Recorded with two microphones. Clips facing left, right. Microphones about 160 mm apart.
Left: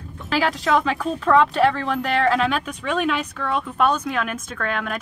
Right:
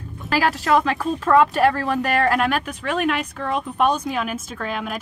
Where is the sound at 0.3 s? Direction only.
10° right (ahead or behind).